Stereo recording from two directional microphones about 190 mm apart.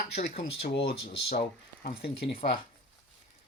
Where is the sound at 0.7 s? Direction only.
25° left (ahead or behind).